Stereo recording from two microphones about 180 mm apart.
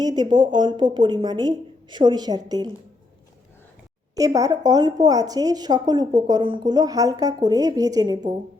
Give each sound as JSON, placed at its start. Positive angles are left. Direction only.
{"t": 0.0, "sound": "a woman's voice", "side_deg": -25}
{"t": 4.1, "sound": "a woman's voice", "side_deg": -20}